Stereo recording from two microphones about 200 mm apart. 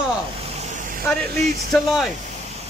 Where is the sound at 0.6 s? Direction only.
35° right (ahead or behind).